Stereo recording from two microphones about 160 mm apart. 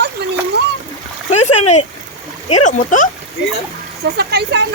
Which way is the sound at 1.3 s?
40° left (ahead or behind).